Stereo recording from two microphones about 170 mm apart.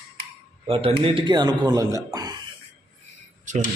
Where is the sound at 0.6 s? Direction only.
35° right (ahead or behind).